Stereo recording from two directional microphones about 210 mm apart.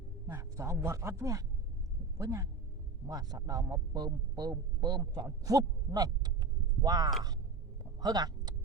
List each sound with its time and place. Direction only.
0.3 s a man's voice: 10° right (ahead or behind)